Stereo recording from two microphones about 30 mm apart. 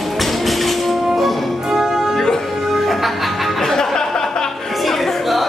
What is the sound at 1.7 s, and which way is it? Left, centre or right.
Music, centre.